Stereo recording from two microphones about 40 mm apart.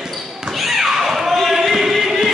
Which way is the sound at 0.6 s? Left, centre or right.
Centre.